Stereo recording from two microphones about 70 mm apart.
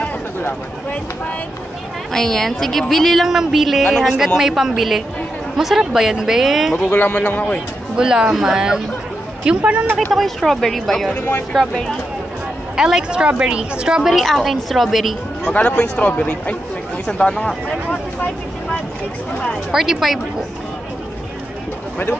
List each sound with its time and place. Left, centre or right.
0.0 s a sound: left
2.1 s speech: centre
6.9 s speech: left
7.9 s a woman's voice: centre
10.1 s a woman's voice: centre
15.4 s speech: left
19.7 s speech: centre